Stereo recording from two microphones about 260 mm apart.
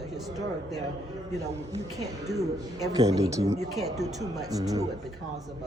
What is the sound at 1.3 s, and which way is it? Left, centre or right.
Speech, right.